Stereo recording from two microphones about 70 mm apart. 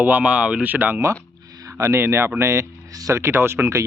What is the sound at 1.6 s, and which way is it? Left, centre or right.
Speech, right.